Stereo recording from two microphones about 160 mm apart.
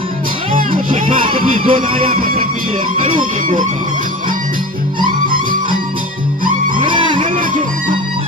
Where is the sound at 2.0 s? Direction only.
60° right (ahead or behind).